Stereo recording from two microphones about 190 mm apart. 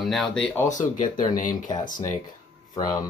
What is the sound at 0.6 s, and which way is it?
Speech, 40° left (ahead or behind).